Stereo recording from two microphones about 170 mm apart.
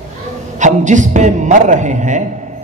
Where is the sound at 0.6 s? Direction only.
45° right (ahead or behind).